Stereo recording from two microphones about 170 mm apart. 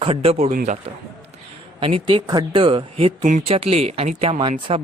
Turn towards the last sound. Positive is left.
turn(degrees=-35)  # may be behind; listen again after turning